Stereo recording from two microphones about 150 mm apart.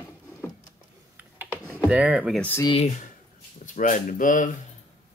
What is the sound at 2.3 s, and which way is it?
Speech, 10° left (ahead or behind).